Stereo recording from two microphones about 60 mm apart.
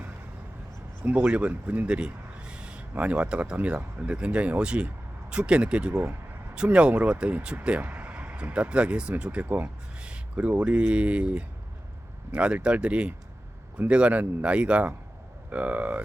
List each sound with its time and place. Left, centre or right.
1.0 s speech: right
10.0 s a sound: centre
10.5 s speech: right